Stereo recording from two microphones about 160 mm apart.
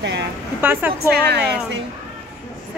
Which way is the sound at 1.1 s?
85° right.